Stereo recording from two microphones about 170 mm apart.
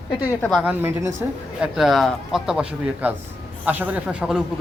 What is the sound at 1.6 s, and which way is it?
A man's voice, centre (ahead or behind).